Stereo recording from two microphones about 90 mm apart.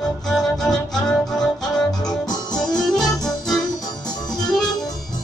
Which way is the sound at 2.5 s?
5° left (ahead or behind).